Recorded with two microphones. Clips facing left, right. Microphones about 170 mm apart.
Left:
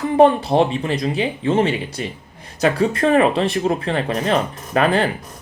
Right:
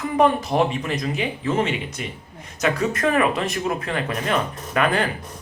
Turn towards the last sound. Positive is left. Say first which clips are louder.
# left 4 dB
turn(degrees=30)  # may be behind; listen again after turning